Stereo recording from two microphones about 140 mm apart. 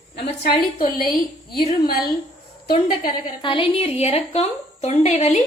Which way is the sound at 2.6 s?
90° left.